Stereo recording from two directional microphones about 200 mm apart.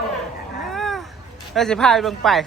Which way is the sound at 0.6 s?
Centre (ahead or behind).